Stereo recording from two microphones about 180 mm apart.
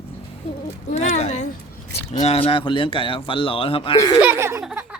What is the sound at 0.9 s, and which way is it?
Speech, 40° left (ahead or behind).